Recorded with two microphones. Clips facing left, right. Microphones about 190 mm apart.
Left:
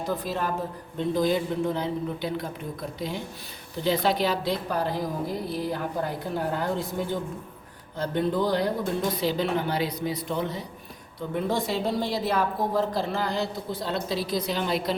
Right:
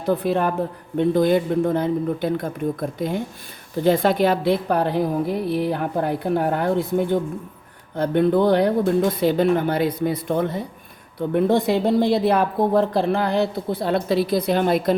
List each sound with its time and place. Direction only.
0.0 s a woman's voice: 60° right (ahead or behind)